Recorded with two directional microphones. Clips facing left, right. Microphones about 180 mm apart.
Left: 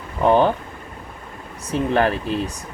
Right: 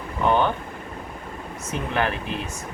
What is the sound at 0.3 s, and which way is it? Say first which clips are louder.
Speech: left 5 dB; 35° left (ahead or behind).